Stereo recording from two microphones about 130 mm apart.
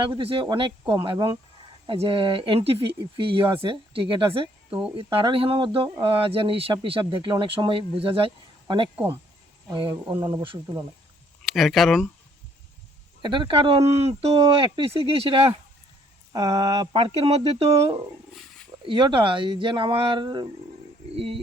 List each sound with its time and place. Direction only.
0.2 s speech: 45° right (ahead or behind)
9.9 s speech: 20° right (ahead or behind)
11.4 s speech: centre (ahead or behind)
13.2 s speech: 40° right (ahead or behind)
16.3 s speech: 35° right (ahead or behind)
17.0 s speech: 50° right (ahead or behind)
18.9 s speech: 40° right (ahead or behind)
21.2 s speech: 45° right (ahead or behind)